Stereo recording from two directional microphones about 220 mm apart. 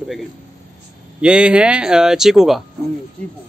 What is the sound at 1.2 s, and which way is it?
A man's voice, 5° right (ahead or behind).